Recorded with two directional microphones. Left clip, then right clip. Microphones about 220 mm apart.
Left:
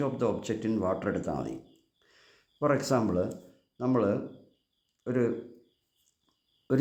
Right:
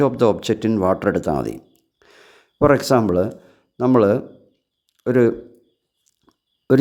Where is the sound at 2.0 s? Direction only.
35° right (ahead or behind).